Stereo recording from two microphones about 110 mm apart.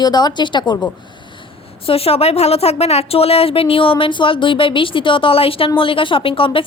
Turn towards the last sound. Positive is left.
turn(degrees=55)  # may be behind; listen again after turning